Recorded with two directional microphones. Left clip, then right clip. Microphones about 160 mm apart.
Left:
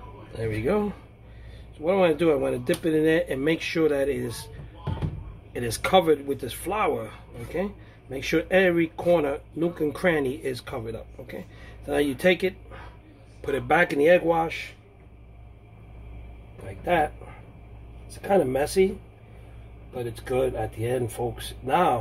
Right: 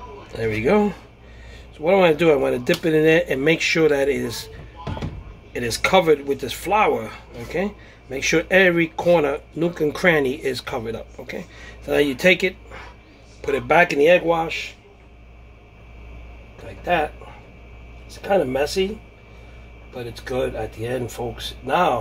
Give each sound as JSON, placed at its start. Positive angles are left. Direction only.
{"t": 0.3, "sound": "speech", "side_deg": -30}
{"t": 5.5, "sound": "speech", "side_deg": -10}
{"t": 18.2, "sound": "speech", "side_deg": 15}
{"t": 19.9, "sound": "speech", "side_deg": 15}
{"t": 21.2, "sound": "speech", "side_deg": 5}